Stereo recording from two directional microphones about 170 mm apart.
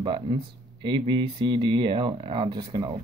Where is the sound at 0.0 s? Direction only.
30° right (ahead or behind).